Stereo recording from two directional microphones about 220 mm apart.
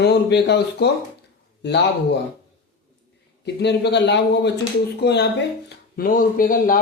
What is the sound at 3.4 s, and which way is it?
Speech, 50° left (ahead or behind).